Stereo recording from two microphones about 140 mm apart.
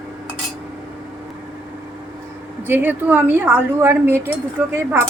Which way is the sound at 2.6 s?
15° right (ahead or behind).